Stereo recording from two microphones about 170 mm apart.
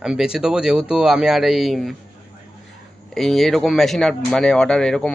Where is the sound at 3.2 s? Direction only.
Centre (ahead or behind).